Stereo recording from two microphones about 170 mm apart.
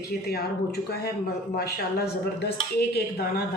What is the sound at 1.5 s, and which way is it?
A woman's voice, 70° left (ahead or behind).